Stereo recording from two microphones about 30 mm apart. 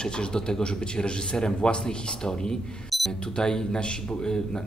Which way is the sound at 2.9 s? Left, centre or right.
Centre.